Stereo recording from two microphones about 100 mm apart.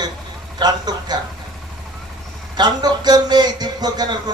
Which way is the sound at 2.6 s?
45° right (ahead or behind).